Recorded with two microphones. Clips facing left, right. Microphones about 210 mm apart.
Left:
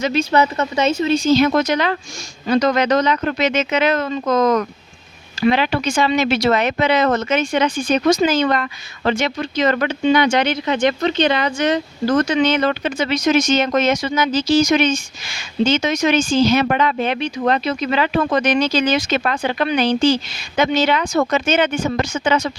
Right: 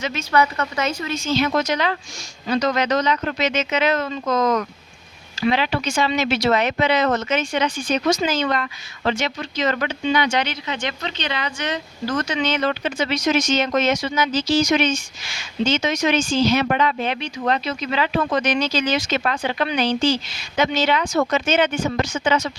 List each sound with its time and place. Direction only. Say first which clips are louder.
0.0 s speech: left 4 dB; 30° left (ahead or behind); by 22.5 s 55° left (ahead or behind)